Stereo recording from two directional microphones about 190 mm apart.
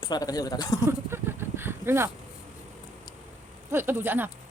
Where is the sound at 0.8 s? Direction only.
15° right (ahead or behind).